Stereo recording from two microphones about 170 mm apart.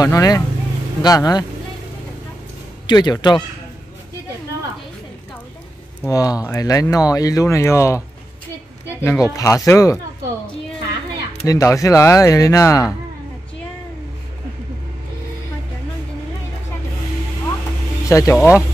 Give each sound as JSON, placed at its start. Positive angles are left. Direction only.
{"t": 0.0, "sound": "speech", "side_deg": 20}
{"t": 2.9, "sound": "speech", "side_deg": 25}
{"t": 6.0, "sound": "speech", "side_deg": 20}
{"t": 11.4, "sound": "speech", "side_deg": 20}
{"t": 18.0, "sound": "speech", "side_deg": 20}